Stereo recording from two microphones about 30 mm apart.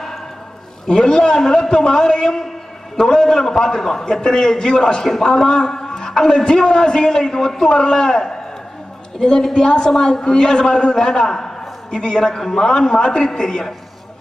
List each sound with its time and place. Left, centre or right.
0.8 s a man's voice: left
9.5 s a man's voice: left
9.8 s a man's voice: centre
12.4 s a man's voice: centre